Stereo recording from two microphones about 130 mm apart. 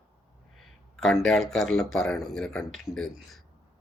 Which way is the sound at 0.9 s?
5° left (ahead or behind).